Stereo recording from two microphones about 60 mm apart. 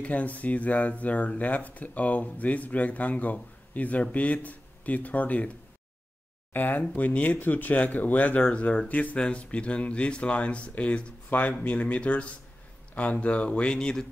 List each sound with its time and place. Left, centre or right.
0.0 s speech: left
6.5 s speech: left; by 14.0 s centre